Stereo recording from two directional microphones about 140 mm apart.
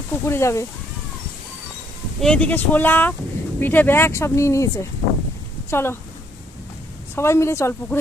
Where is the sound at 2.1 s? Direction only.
5° left (ahead or behind).